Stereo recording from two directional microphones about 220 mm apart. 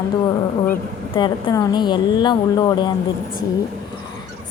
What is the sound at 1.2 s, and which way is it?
A woman's voice, 20° left (ahead or behind).